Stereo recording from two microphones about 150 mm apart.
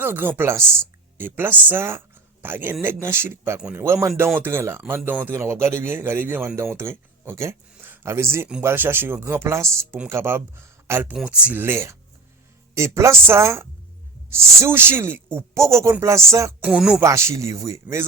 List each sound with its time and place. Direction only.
0.0 s speech: 15° right (ahead or behind)
16.6 s speech: 5° right (ahead or behind)
17.0 s speech: 20° right (ahead or behind)